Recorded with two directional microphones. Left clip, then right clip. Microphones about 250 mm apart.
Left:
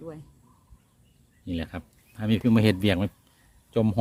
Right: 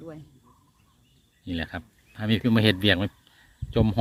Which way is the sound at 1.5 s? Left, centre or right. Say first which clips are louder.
Right 2 dB; centre.